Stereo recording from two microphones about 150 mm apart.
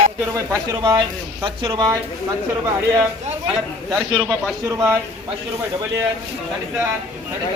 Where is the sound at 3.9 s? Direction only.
5° right (ahead or behind).